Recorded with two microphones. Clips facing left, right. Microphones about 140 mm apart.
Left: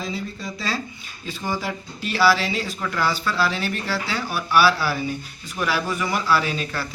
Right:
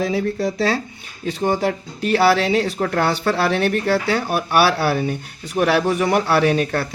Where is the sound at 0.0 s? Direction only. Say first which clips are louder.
Right 10 dB; 70° right (ahead or behind).